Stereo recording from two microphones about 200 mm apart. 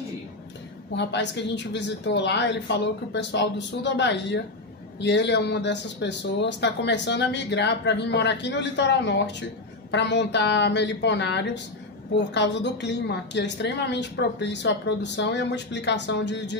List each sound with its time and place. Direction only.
0.9 s speech: 60° left (ahead or behind)